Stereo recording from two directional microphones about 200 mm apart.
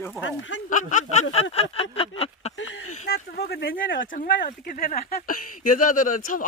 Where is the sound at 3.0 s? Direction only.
50° left (ahead or behind).